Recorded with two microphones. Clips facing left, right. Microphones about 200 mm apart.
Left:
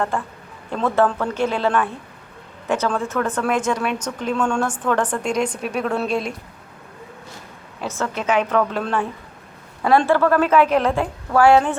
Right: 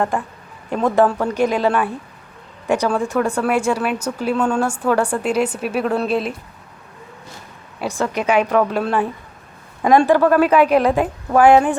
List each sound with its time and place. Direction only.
0.1 s speech: 15° right (ahead or behind)
7.8 s speech: 15° right (ahead or behind)